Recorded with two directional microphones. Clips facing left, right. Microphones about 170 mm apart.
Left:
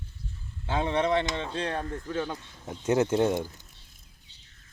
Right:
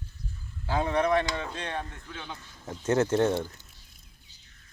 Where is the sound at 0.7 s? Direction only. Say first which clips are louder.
Even; 20° left (ahead or behind); by 2.3 s 40° left (ahead or behind).